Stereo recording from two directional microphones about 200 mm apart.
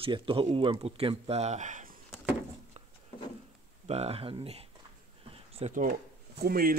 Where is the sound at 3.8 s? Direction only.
30° right (ahead or behind).